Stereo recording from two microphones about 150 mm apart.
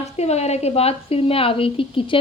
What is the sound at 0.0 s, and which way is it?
A woman's voice, 45° left (ahead or behind).